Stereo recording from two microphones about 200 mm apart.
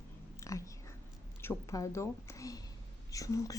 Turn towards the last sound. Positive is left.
turn(degrees=15)  # may be behind; listen again after turning